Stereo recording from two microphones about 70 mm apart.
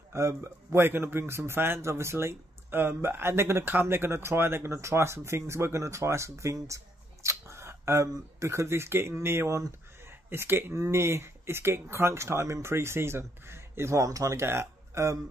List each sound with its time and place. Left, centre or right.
0.1 s a man's voice: right
7.2 s a sound: right
8.1 s a man's voice: right
10.0 s a sound: right
10.7 s a man's voice: right
14.4 s speech: right